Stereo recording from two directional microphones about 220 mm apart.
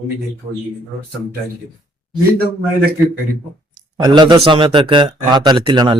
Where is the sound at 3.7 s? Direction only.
20° right (ahead or behind).